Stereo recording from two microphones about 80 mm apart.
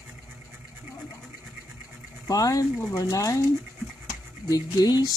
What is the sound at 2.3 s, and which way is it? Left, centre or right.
Speech, left.